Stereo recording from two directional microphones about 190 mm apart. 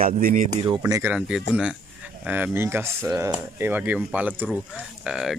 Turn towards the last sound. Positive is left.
turn(degrees=-5)  # may be behind; listen again after turning